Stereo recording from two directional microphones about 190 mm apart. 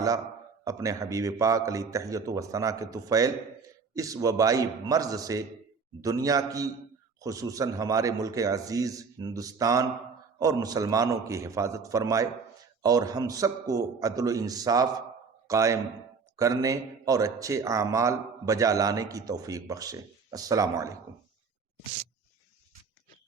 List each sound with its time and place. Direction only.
0.6 s a man's voice: 15° right (ahead or behind)